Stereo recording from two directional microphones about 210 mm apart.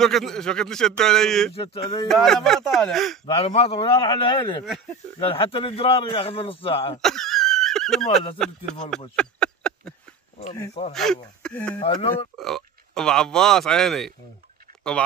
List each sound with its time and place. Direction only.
0.0 s speech: centre (ahead or behind)
1.5 s a man's voice: 25° left (ahead or behind)
2.0 s speech: centre (ahead or behind)
3.4 s a man's voice: 25° left (ahead or behind)
7.0 s a sound: centre (ahead or behind)
8.4 s speech: 5° left (ahead or behind)
9.1 s a sound: 5° left (ahead or behind)
10.4 s speech: 30° left (ahead or behind)
10.9 s speech: centre (ahead or behind)
11.8 s a man's voice: 25° left (ahead or behind)
12.4 s speech: centre (ahead or behind)